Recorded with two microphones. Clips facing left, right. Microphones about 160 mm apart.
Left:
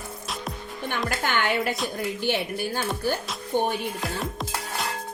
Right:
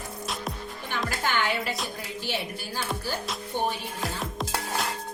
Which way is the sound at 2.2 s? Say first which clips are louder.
Left 6 dB; 55° left (ahead or behind).